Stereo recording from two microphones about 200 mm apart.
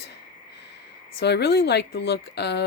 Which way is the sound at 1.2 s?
55° left (ahead or behind).